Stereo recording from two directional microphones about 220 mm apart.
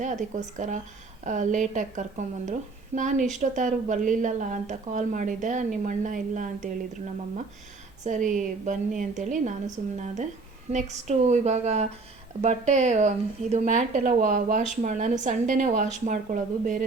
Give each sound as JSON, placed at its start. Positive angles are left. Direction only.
{"t": 0.0, "sound": "a woman's voice", "side_deg": -35}
{"t": 8.0, "sound": "a woman's voice", "side_deg": -35}